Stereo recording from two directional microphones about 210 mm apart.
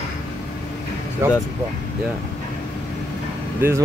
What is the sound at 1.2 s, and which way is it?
Speech, 15° right (ahead or behind).